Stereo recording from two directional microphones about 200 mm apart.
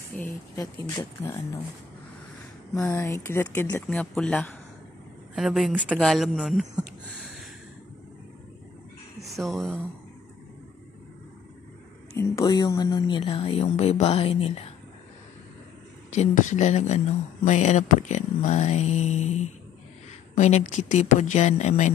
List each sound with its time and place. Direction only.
0.2 s speech: 10° left (ahead or behind)
2.7 s speech: 15° left (ahead or behind); by 7.4 s centre (ahead or behind)
9.2 s speech: centre (ahead or behind)
12.2 s speech: 15° left (ahead or behind)
16.2 s speech: 40° left (ahead or behind)